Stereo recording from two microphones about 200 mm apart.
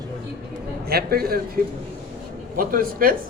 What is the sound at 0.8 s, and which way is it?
Speech, 50° right (ahead or behind).